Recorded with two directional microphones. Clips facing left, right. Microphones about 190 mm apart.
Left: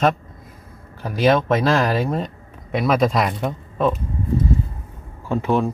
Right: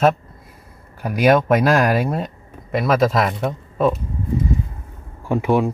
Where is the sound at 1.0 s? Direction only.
10° right (ahead or behind).